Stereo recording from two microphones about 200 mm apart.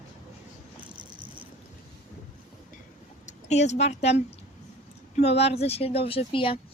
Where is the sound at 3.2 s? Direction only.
35° left (ahead or behind).